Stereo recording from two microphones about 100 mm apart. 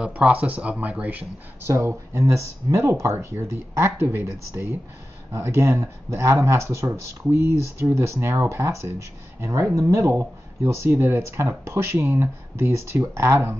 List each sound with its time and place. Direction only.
0.0 s speech: 15° right (ahead or behind)
1.7 s speech: 25° right (ahead or behind)
5.3 s speech: 30° right (ahead or behind)